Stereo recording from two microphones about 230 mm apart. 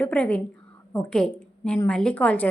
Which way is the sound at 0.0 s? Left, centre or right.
Centre.